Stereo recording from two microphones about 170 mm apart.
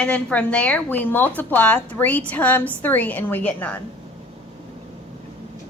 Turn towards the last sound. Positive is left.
turn(degrees=10)  # may be behind; listen again after turning